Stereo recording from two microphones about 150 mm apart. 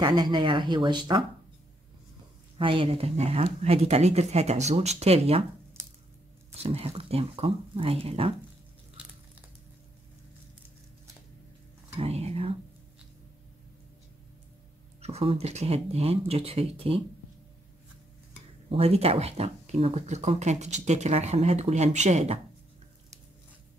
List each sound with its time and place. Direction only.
0.0 s speech: 30° right (ahead or behind)
2.6 s speech: 35° right (ahead or behind)
6.6 s speech: 45° right (ahead or behind)
12.0 s speech: 45° right (ahead or behind)
15.0 s speech: 45° right (ahead or behind)
18.7 s speech: 40° right (ahead or behind)